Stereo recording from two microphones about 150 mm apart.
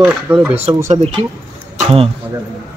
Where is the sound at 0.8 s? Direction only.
45° right (ahead or behind).